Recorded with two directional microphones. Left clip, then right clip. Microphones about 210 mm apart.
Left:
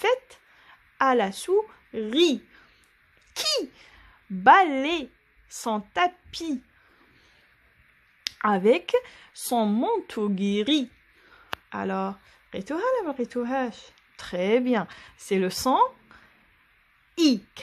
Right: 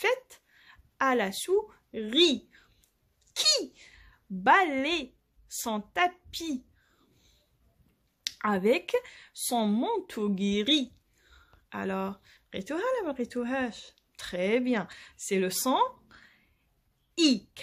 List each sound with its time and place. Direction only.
0.0 s a sound: 10° left (ahead or behind)
3.3 s speech: 10° left (ahead or behind)
8.2 s speech: 10° left (ahead or behind)